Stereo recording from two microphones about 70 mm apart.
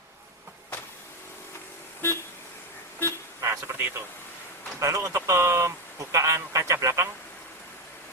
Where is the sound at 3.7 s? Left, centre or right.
Right.